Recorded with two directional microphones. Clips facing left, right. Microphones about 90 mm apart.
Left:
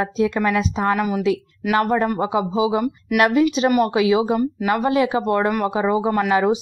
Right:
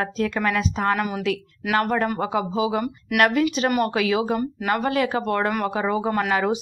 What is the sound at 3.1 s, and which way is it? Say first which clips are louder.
A woman's voice: left 3 dB; 5° left (ahead or behind).